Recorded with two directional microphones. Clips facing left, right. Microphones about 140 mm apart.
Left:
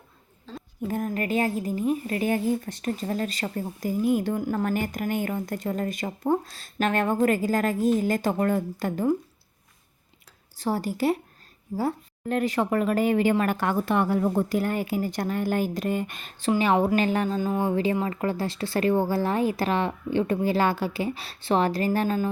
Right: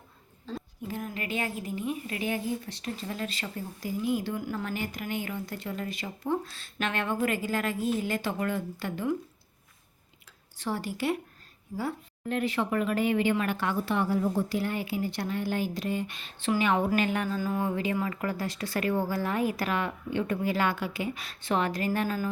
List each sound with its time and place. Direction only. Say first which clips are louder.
0.5 s a sound: right 3 dB; centre (ahead or behind)
0.9 s a woman's voice: left 8 dB; 45° left (ahead or behind)
10.6 s a woman's voice: left 6 dB; 40° left (ahead or behind)
16.5 s speech: left 4 dB; 30° left (ahead or behind)